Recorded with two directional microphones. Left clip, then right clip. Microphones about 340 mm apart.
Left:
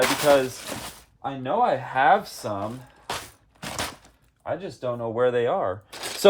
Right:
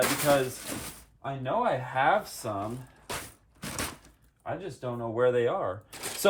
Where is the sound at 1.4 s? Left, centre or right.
Left.